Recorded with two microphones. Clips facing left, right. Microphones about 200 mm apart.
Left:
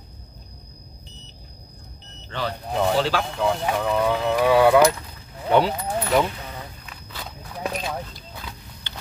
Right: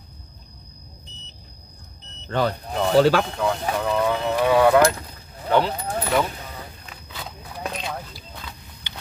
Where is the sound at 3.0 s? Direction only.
50° right (ahead or behind).